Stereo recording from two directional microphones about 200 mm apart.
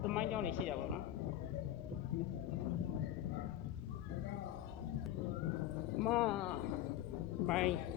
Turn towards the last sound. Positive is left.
turn(degrees=0)  # may be behind; listen again after turning